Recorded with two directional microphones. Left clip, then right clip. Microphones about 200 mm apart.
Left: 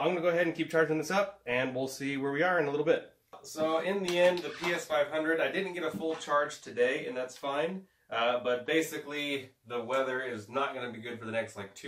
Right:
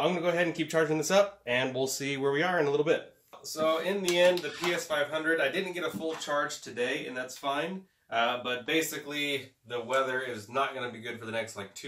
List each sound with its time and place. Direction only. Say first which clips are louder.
0.0 s speech: right 1 dB; 35° right (ahead or behind)
3.5 s speech: right 2 dB; centre (ahead or behind)